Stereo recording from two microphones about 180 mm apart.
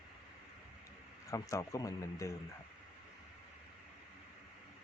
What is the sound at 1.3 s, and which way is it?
Speech, 15° left (ahead or behind).